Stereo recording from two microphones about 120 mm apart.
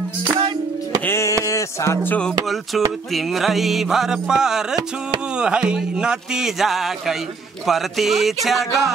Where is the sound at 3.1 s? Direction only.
Centre (ahead or behind).